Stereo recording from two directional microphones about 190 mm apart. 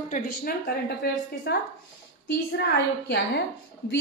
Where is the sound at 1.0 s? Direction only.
55° left (ahead or behind).